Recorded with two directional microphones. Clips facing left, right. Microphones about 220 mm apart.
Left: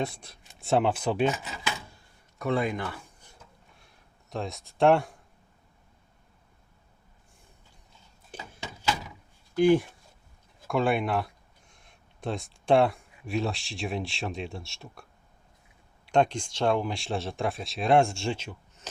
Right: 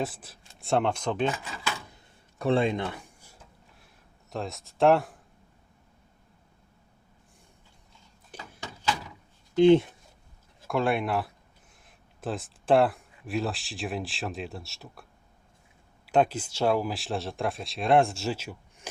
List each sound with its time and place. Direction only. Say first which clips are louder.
0.0 s speech: even; 5° right (ahead or behind)
1.3 s speech: left 1 dB; 20° left (ahead or behind)
2.4 s speech: right 3 dB; 30° right (ahead or behind)
4.3 s speech: even; centre (ahead or behind)
8.6 s door: even; 10° left (ahead or behind)
9.6 s speech: right 3 dB; 25° right (ahead or behind)
10.7 s speech: left 1 dB; centre (ahead or behind)
16.0 s speech: even; 5° right (ahead or behind)